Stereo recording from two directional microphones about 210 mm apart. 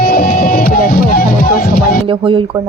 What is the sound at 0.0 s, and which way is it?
Music, 45° left (ahead or behind).